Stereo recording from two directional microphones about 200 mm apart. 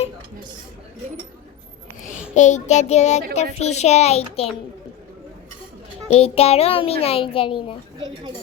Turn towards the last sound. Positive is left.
turn(degrees=25)  # may be behind; listen again after turning